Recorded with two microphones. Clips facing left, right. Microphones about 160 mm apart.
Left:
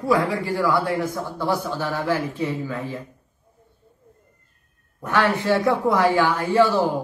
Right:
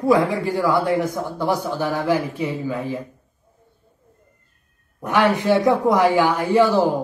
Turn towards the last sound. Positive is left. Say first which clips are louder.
# right 2 dB
turn(degrees=-15)  # may be behind; listen again after turning